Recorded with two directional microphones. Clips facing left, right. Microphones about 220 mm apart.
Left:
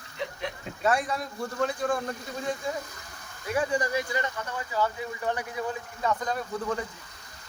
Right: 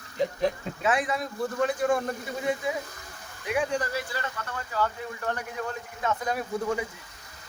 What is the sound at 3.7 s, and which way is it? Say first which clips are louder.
Speech: left 2 dB; 15° left (ahead or behind).